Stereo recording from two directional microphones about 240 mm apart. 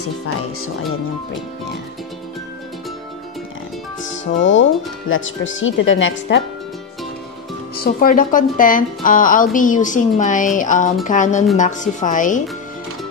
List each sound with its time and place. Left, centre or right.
4.1 s speech: left
7.7 s speech: left